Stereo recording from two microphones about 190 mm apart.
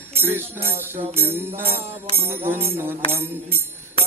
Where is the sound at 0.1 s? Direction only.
10° right (ahead or behind).